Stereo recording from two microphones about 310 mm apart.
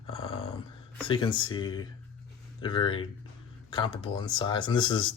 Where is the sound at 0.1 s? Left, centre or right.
Centre.